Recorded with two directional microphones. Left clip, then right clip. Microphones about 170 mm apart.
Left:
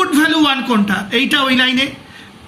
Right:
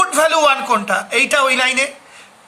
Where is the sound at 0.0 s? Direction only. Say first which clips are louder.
Right 1 dB; 75° right (ahead or behind).